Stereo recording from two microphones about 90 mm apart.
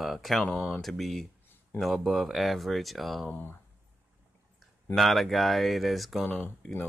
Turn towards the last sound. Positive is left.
turn(degrees=15)  # may be behind; listen again after turning